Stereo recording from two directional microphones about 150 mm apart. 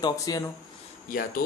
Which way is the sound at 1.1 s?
75° left (ahead or behind).